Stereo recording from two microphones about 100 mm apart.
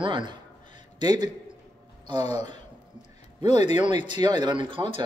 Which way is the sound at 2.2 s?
90° left.